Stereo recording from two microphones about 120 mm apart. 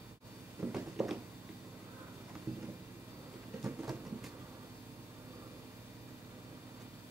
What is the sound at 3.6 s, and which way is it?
Rain, 20° right (ahead or behind).